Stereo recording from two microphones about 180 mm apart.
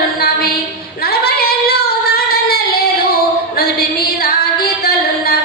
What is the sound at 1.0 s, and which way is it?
Female singing, 60° left (ahead or behind).